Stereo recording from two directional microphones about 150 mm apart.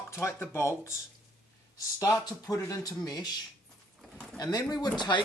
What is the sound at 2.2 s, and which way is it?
Speech, 20° left (ahead or behind).